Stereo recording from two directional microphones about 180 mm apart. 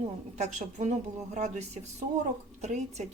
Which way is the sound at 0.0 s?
40° right (ahead or behind).